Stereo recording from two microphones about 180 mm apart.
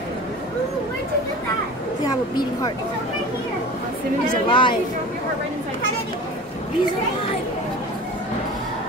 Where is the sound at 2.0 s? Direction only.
20° left (ahead or behind).